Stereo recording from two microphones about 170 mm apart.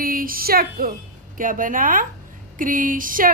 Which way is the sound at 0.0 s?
55° right (ahead or behind).